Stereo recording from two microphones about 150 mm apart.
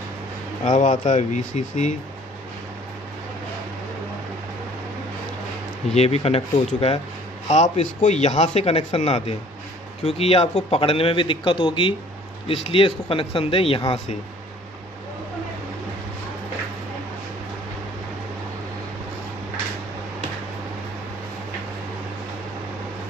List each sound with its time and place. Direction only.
0.7 s speech: 55° left (ahead or behind)
5.9 s speech: 45° left (ahead or behind)